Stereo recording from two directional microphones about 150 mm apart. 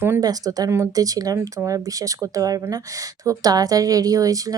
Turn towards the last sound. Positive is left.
turn(degrees=-25)  # may be behind; listen again after turning